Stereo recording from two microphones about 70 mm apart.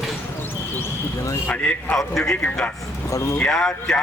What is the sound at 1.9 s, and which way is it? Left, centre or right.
Speech, centre.